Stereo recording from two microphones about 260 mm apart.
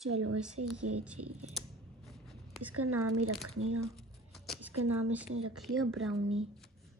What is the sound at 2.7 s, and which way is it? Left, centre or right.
Speech, right.